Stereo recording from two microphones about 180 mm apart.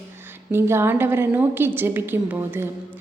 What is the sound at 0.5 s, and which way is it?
A woman's voice, 15° right (ahead or behind).